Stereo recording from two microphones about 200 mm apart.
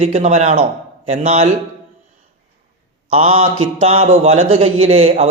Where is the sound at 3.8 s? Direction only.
30° right (ahead or behind).